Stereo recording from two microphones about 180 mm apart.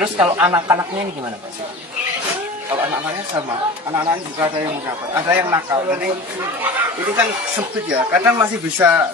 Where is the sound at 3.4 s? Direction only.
10° right (ahead or behind).